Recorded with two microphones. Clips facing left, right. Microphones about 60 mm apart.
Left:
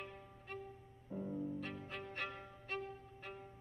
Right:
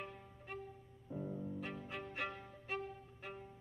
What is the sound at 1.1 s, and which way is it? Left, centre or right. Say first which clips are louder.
Violin: left 2 dB; centre.